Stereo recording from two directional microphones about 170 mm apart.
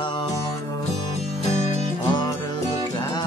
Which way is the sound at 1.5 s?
45° left (ahead or behind).